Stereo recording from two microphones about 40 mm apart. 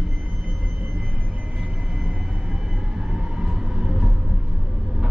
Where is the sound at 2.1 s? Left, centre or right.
Centre.